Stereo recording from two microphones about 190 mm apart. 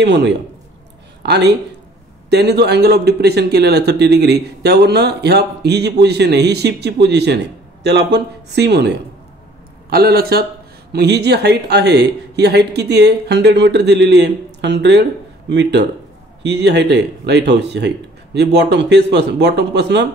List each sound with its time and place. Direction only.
0.0 s a man's voice: 65° right (ahead or behind)